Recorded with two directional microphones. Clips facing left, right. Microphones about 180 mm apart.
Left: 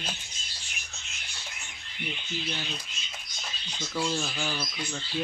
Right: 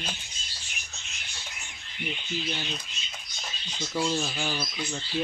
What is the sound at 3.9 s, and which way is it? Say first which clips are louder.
Speech: right 2 dB; 10° right (ahead or behind).